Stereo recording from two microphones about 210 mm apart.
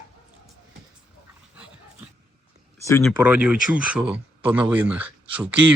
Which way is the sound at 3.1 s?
5° right (ahead or behind).